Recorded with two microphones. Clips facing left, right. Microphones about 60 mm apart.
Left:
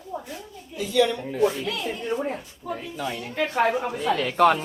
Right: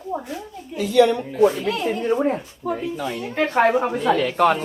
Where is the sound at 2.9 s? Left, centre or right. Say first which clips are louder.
Right 3 dB; centre.